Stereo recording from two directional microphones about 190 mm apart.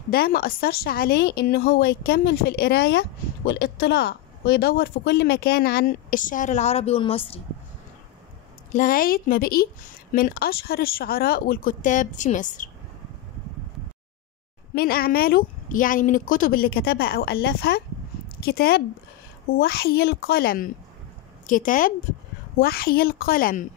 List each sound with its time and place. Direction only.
0.1 s a woman's voice: 55° left (ahead or behind); by 7.4 s 30° left (ahead or behind)
8.7 s a woman's voice: 45° left (ahead or behind)
14.8 s a woman's voice: 50° left (ahead or behind)